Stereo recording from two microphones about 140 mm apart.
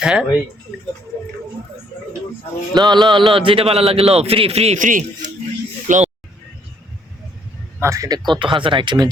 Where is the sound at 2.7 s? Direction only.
30° right (ahead or behind).